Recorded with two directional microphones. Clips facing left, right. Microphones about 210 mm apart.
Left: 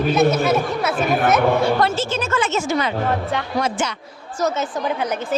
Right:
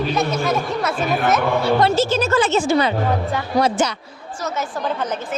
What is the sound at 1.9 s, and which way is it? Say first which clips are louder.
A woman's voice: right 5 dB; 40° right (ahead or behind).